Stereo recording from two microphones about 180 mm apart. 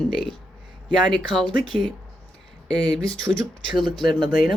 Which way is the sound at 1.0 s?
Centre (ahead or behind).